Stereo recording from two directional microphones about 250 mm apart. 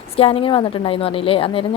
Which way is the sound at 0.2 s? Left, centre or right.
Left.